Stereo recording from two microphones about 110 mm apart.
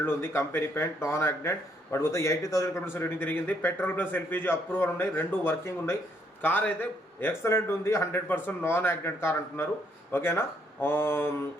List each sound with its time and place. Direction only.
0.0 s speech: 20° left (ahead or behind)